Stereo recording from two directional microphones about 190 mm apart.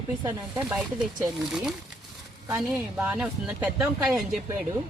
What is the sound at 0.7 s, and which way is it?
Speech, 5° right (ahead or behind).